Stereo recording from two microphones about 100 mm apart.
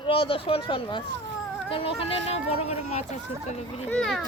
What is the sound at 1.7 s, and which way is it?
Speech, 75° left (ahead or behind).